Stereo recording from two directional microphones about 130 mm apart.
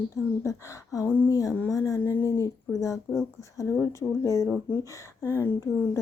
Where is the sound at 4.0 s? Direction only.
25° left (ahead or behind).